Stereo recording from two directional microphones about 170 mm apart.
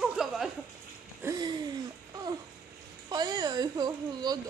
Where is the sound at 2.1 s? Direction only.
20° right (ahead or behind).